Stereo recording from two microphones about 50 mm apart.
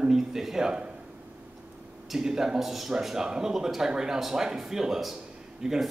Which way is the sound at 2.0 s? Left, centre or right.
Centre.